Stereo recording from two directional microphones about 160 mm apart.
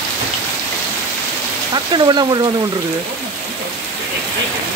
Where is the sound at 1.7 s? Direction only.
25° right (ahead or behind).